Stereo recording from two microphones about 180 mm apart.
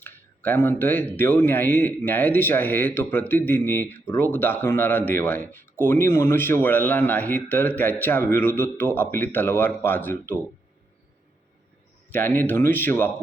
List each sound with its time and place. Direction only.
0.0 s speech: 10° left (ahead or behind)
12.1 s speech: 10° left (ahead or behind)